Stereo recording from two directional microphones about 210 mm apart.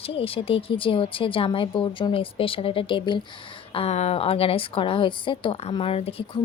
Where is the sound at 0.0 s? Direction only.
25° left (ahead or behind).